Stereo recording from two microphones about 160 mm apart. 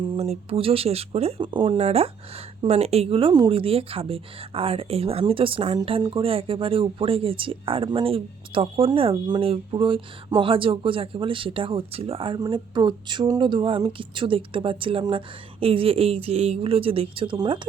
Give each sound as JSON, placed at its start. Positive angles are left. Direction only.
{"t": 0.0, "sound": "speech", "side_deg": -35}